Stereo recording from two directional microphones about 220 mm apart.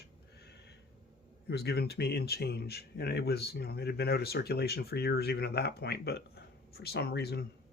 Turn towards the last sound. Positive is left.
turn(degrees=45)  # may be behind; listen again after turning